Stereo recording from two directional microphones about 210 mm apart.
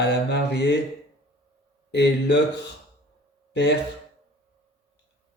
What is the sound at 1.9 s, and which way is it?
Mantra, 55° left (ahead or behind).